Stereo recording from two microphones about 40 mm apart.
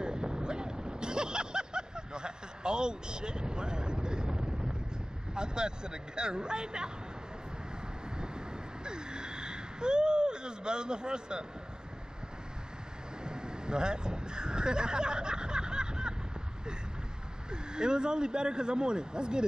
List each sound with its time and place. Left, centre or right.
0.0 s vehicle: right
5.3 s speech: right
8.8 s a sound: right
13.2 s vehicle: right
17.5 s speech: right